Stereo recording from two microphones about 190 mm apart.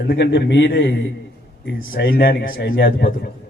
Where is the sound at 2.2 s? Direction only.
50° left (ahead or behind).